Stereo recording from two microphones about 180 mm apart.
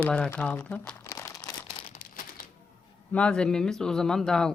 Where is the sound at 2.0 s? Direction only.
55° left (ahead or behind).